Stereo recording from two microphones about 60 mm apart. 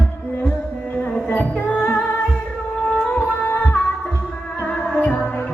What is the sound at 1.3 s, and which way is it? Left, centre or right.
Music, left.